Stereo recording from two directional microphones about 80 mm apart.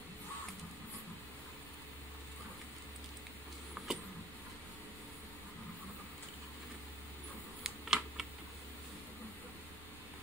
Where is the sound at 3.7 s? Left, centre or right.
Centre.